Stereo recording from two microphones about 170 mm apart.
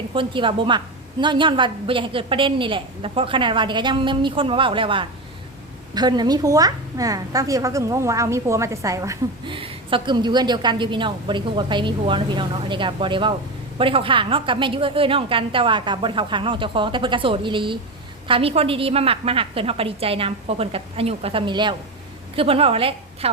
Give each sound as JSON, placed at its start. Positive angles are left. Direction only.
{"t": 0.1, "sound": "a woman's voice", "side_deg": -30}